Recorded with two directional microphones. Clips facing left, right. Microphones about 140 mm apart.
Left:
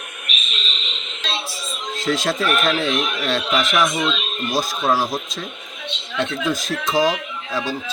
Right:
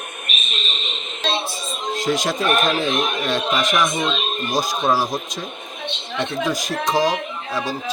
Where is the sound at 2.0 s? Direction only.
15° right (ahead or behind).